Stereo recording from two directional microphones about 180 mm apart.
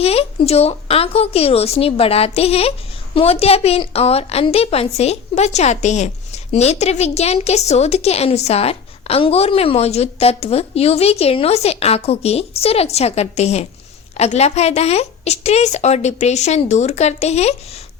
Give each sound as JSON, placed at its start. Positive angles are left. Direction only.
{"t": 0.0, "sound": "a woman's voice", "side_deg": 35}